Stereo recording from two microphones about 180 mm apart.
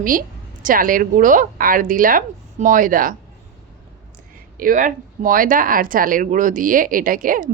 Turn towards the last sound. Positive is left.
turn(degrees=-50)  # may be behind; listen again after turning